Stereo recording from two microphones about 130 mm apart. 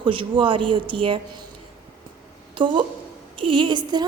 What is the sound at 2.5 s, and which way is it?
A woman's voice, 40° right (ahead or behind).